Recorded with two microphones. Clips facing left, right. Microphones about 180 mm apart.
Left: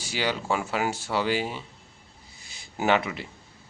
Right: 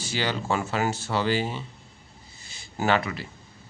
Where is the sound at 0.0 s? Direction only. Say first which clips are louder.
Even; 10° left (ahead or behind).